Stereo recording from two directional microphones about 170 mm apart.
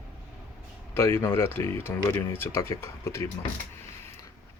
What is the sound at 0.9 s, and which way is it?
Speech, 15° left (ahead or behind).